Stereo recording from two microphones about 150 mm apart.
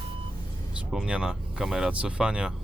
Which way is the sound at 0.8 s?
5° right (ahead or behind).